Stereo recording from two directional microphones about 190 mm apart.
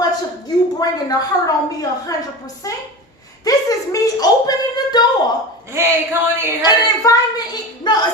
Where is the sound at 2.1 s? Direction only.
20° left (ahead or behind).